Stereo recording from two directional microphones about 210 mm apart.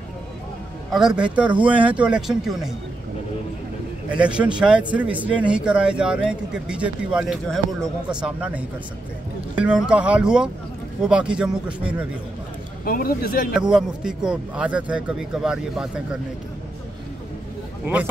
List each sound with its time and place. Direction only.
0.9 s speech: 5° right (ahead or behind)
4.1 s speech: 5° right (ahead or behind)
12.8 s speech: 45° left (ahead or behind)
13.5 s speech: 5° right (ahead or behind)
17.8 s speech: 10° right (ahead or behind)